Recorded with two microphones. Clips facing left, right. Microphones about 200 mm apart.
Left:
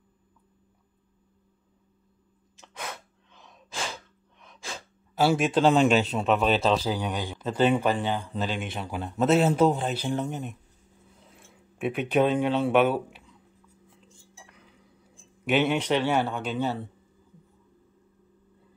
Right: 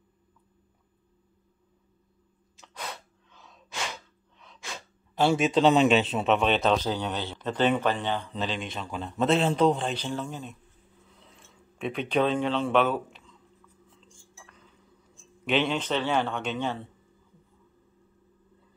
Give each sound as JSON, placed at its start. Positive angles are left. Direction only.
{"t": 2.6, "sound": "sneeze", "side_deg": 15}
{"t": 5.1, "sound": "a man's voice", "side_deg": 5}
{"t": 15.4, "sound": "a man's voice", "side_deg": 10}